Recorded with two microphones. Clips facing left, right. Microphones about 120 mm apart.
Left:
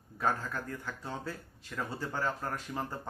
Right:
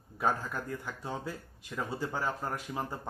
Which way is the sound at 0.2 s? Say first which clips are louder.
Right 1 dB; 15° right (ahead or behind).